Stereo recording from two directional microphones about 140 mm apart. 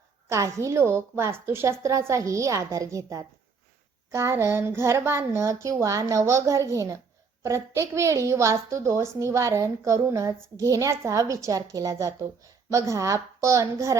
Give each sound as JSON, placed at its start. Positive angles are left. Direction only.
{"t": 0.3, "sound": "a woman's voice", "side_deg": -20}